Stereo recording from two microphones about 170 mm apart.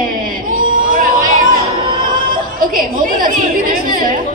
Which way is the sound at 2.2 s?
55° right (ahead or behind).